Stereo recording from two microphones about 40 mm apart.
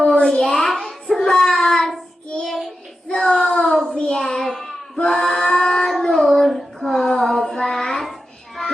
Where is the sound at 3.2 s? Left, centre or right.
Centre.